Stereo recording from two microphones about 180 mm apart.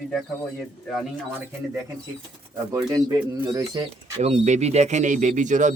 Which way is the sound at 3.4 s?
20° right (ahead or behind).